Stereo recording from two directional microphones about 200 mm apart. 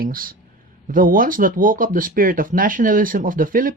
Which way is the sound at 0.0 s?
45° right (ahead or behind).